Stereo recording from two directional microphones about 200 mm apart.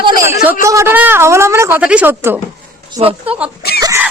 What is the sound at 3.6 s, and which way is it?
Speech, 50° left (ahead or behind).